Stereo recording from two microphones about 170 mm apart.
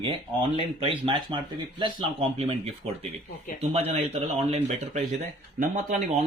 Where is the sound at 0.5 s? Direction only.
35° right (ahead or behind).